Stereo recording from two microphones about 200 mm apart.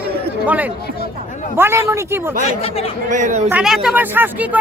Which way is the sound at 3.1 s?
40° right (ahead or behind).